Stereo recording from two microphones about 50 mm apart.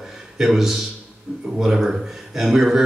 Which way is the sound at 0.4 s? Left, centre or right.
Centre.